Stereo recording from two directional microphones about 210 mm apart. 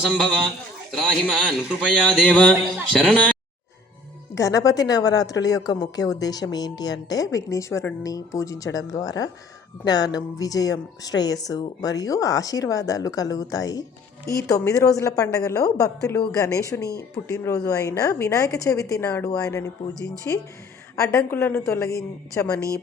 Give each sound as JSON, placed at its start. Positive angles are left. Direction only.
{"t": 0.0, "sound": "a man's voice", "side_deg": 0}
{"t": 2.2, "sound": "a woman's voice", "side_deg": 5}
{"t": 4.4, "sound": "a woman's voice", "side_deg": 15}